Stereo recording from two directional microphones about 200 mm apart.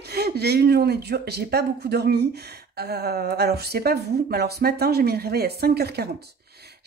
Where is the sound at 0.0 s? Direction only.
55° right (ahead or behind).